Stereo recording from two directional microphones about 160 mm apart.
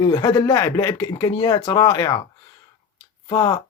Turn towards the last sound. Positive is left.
turn(degrees=25)  # may be behind; listen again after turning